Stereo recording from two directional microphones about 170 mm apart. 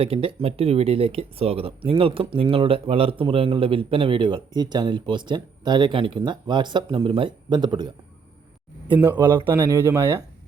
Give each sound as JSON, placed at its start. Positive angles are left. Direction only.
{"t": 0.0, "sound": "speech", "side_deg": -35}
{"t": 9.0, "sound": "speech", "side_deg": -25}